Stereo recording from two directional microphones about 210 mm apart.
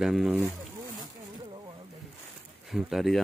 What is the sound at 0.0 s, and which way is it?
Speech, centre (ahead or behind).